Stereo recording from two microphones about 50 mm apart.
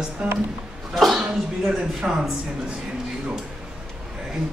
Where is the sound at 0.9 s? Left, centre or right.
Centre.